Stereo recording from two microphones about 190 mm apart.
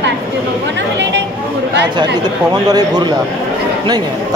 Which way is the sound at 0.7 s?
70° right (ahead or behind).